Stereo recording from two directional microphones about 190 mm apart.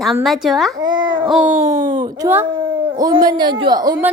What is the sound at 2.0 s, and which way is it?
A child's voice, 20° right (ahead or behind).